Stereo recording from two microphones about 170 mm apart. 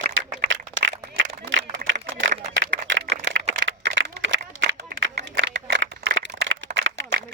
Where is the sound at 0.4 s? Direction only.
90° right.